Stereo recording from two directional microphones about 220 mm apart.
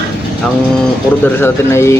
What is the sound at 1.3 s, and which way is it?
Speech, 10° left (ahead or behind).